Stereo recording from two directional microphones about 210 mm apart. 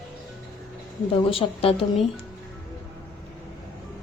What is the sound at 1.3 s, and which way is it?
Speech, 25° left (ahead or behind).